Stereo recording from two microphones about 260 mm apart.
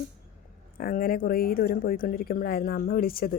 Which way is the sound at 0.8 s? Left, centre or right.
Left.